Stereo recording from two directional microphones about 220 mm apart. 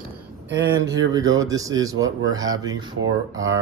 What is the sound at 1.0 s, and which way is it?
Speech, 15° right (ahead or behind).